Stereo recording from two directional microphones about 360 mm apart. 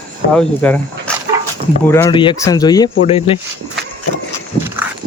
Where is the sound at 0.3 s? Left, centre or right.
Centre.